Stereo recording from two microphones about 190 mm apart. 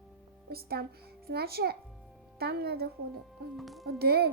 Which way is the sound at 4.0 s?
55° right (ahead or behind).